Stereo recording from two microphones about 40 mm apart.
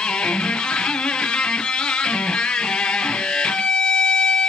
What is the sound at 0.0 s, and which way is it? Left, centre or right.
Music, left.